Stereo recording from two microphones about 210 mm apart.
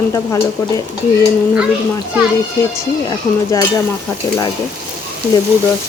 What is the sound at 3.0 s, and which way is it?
Speech, 15° left (ahead or behind).